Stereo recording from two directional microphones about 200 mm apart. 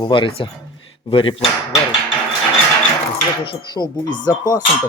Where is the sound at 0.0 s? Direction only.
25° left (ahead or behind).